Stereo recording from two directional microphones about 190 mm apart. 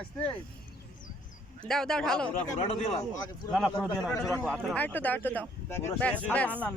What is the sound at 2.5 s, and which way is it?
Speech, 35° left (ahead or behind).